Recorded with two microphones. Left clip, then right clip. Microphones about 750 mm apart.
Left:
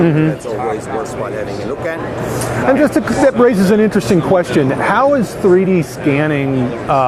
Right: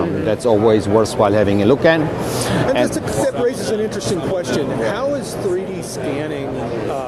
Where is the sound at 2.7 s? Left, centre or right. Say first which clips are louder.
Left 9 dB; left.